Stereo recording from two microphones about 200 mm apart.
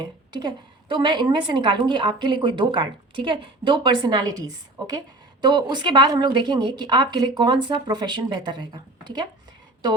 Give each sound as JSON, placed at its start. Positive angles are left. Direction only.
{"t": 0.0, "sound": "a woman's voice", "side_deg": -20}